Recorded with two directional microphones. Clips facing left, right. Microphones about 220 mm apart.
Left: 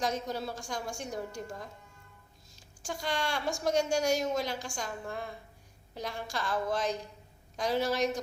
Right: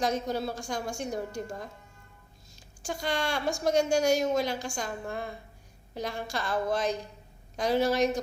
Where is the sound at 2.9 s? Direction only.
60° right (ahead or behind).